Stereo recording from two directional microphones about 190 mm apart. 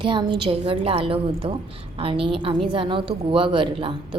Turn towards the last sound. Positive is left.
turn(degrees=-25)  # may be behind; listen again after turning